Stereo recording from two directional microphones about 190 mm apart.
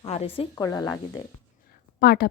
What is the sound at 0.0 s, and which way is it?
Speech, 30° left (ahead or behind).